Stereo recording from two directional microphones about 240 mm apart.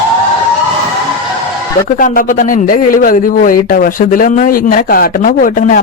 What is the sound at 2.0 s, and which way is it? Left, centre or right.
A man's voice, left.